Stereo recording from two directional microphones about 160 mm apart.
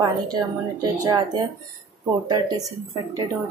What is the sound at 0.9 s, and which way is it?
A woman's voice, 25° right (ahead or behind).